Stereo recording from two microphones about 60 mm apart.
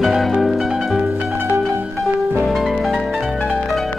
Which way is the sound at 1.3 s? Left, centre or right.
Right.